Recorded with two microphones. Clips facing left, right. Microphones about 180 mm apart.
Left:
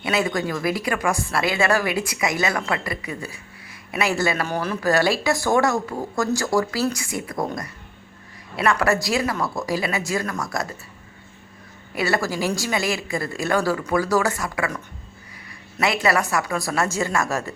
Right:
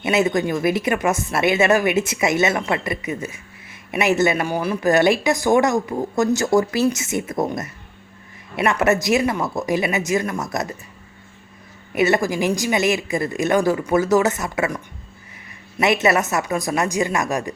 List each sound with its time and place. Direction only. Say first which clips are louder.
0.0 s speech: right 4 dB; 20° right (ahead or behind)
11.9 s speech: right 5 dB; 20° right (ahead or behind)
15.8 s speech: right 3 dB; 20° right (ahead or behind)